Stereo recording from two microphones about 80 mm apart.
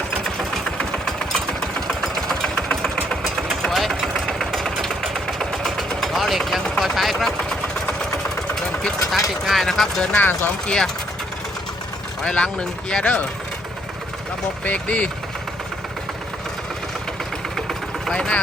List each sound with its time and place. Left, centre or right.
0.3 s engine: centre
6.7 s vehicle: centre
9.5 s speech: centre
10.2 s speech: left
10.7 s speech: centre
12.2 s speech: centre
14.6 s speech: centre
17.7 s vehicle: centre